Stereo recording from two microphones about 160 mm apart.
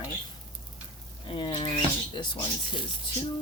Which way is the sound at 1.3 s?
30° left (ahead or behind).